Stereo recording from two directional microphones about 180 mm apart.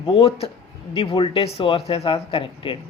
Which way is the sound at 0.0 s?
30° left (ahead or behind).